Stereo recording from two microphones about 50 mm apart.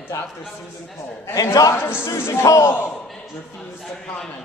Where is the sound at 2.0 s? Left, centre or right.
Left.